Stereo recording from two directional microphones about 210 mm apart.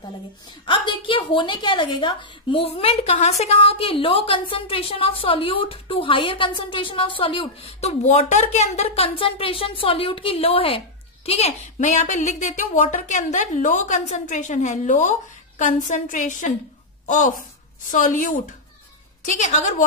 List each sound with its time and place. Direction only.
0.7 s a woman's voice: 25° left (ahead or behind)